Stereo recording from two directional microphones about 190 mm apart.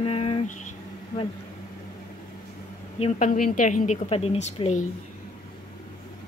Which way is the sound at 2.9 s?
35° left (ahead or behind).